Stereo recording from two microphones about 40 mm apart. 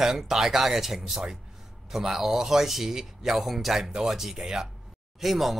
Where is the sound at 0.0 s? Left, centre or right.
Centre.